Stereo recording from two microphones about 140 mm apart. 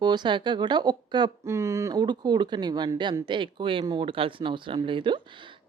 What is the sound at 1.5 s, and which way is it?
Speech, 20° right (ahead or behind).